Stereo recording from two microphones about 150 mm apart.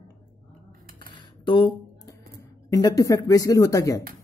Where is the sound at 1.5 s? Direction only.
30° left (ahead or behind).